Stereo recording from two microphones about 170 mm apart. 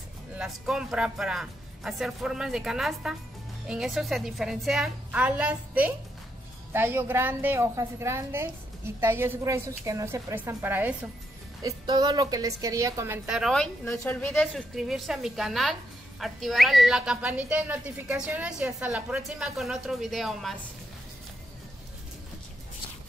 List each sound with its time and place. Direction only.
0.4 s a woman's voice: 5° right (ahead or behind)
11.6 s a woman's voice: 25° right (ahead or behind)
13.3 s a woman's voice: centre (ahead or behind)